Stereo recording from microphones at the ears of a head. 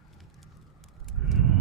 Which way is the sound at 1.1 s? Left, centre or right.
Right.